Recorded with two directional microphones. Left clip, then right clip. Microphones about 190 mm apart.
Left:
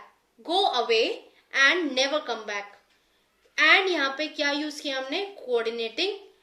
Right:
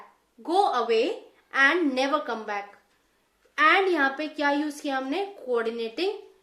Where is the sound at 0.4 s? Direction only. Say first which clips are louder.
Right 1 dB; 45° right (ahead or behind).